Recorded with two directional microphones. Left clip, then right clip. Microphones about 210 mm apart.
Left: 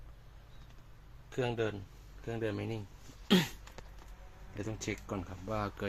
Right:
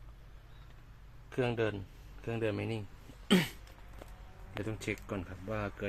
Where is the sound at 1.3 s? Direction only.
10° right (ahead or behind).